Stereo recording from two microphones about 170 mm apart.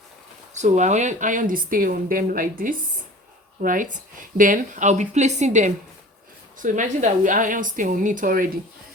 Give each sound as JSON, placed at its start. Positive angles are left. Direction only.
{"t": 0.5, "sound": "speech", "side_deg": -45}